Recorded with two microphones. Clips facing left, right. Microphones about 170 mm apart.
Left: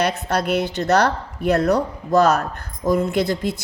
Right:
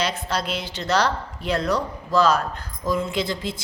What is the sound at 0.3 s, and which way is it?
A woman's voice, 60° left (ahead or behind).